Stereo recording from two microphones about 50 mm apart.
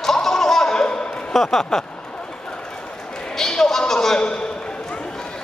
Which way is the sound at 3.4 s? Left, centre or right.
Centre.